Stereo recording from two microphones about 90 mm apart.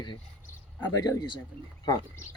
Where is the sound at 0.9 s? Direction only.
45° left (ahead or behind).